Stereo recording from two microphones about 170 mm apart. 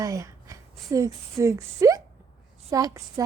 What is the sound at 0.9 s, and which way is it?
A woman's voice, 20° right (ahead or behind).